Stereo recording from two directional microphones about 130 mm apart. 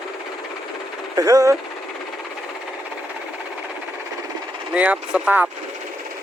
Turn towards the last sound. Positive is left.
turn(degrees=-10)  # may be behind; listen again after turning